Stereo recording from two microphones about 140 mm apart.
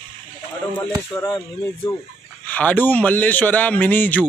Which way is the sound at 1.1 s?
20° left (ahead or behind).